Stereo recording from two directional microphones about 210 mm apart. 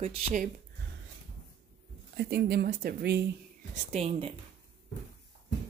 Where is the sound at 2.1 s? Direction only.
50° right (ahead or behind).